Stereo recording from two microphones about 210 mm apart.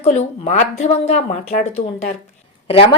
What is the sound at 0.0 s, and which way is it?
A woman's voice, 30° left (ahead or behind).